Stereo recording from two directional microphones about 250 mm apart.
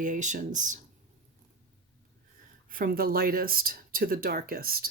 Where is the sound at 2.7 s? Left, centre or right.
Right.